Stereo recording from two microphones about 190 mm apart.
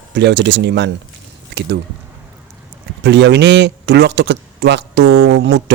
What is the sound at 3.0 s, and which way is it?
Speech, 65° right (ahead or behind).